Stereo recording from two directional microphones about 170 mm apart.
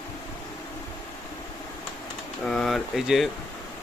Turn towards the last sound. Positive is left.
turn(degrees=0)  # may be behind; listen again after turning